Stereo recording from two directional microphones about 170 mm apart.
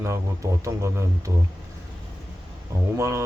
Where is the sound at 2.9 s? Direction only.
15° right (ahead or behind).